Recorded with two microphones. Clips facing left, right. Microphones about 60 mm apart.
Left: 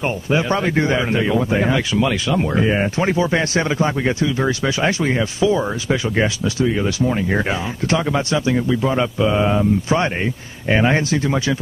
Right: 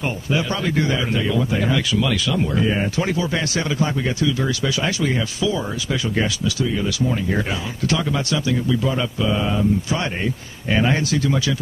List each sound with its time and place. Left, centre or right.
0.3 s a man's voice: left